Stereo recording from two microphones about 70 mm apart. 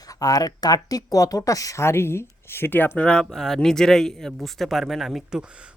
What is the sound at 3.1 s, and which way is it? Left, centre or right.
Speech, centre.